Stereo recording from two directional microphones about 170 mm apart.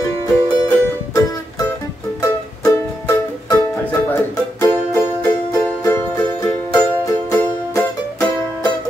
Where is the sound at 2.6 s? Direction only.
20° left (ahead or behind).